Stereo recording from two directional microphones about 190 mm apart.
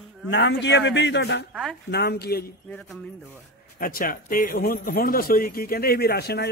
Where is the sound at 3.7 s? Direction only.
50° left (ahead or behind).